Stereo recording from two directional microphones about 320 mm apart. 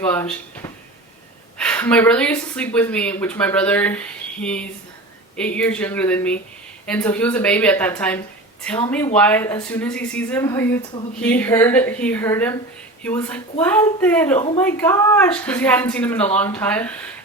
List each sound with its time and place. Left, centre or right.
0.0 s speech: centre
14.3 s a woman's voice: centre
14.6 s speech: centre